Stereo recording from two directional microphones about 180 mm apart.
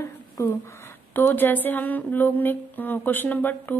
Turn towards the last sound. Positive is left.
turn(degrees=10)  # may be behind; listen again after turning